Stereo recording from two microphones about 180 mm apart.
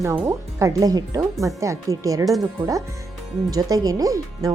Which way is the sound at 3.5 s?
20° right (ahead or behind).